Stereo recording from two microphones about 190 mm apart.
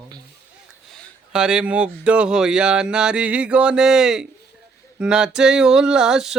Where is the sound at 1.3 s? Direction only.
5° right (ahead or behind).